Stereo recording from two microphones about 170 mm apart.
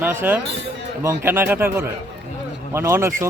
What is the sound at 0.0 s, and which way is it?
Speech, 10° right (ahead or behind).